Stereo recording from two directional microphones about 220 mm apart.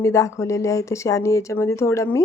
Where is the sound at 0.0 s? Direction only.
15° left (ahead or behind).